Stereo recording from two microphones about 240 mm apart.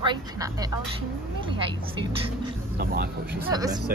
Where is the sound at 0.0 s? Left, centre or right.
Centre.